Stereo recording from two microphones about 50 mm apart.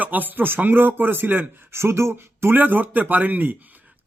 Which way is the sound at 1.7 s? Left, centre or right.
Right.